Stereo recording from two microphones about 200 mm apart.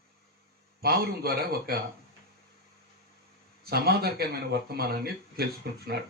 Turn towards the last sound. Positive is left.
turn(degrees=-55)  # may be behind; listen again after turning